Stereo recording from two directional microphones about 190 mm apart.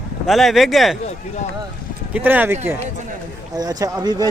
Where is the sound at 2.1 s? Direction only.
10° right (ahead or behind).